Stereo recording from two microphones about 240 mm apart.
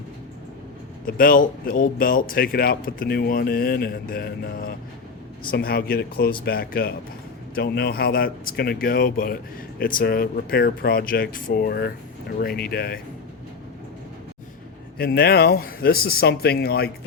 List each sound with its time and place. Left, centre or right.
1.0 s speech: left
14.9 s speech: left